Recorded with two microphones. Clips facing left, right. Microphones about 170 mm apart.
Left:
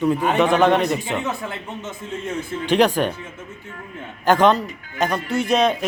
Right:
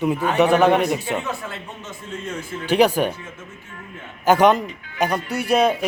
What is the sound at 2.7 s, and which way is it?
Speech, 10° right (ahead or behind).